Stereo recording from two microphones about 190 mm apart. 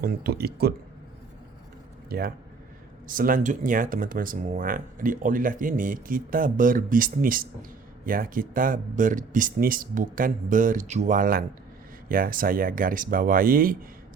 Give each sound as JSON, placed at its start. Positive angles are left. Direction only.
{"t": 0.0, "sound": "speech", "side_deg": -55}
{"t": 2.0, "sound": "speech", "side_deg": -55}